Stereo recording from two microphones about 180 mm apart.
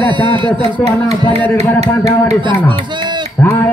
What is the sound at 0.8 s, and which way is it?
Speech, 20° left (ahead or behind).